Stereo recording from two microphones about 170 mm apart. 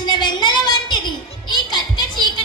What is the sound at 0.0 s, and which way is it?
Music, 25° left (ahead or behind).